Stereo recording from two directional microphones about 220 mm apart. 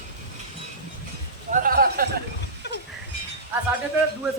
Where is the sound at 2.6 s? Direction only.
50° left (ahead or behind).